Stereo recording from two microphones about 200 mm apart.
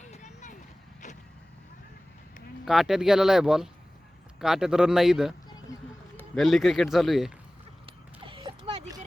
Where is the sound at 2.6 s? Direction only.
Centre (ahead or behind).